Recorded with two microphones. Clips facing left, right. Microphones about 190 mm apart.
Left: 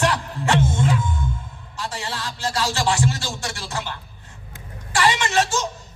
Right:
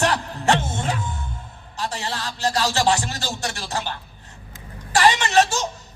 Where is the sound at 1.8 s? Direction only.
40° right (ahead or behind).